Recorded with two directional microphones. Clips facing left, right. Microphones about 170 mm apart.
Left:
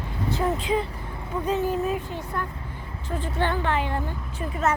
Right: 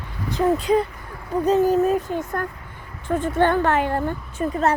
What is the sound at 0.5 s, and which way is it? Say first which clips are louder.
Female singing: right 6 dB; 40° right (ahead or behind).